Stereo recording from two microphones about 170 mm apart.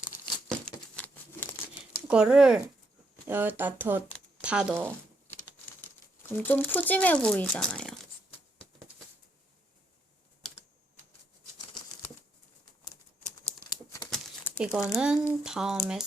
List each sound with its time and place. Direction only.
0.4 s crumpling: 5° left (ahead or behind)
2.0 s speech: 5° right (ahead or behind)
6.3 s speech: 10° left (ahead or behind)
13.7 s crumpling: 25° left (ahead or behind)
14.6 s speech: 5° right (ahead or behind)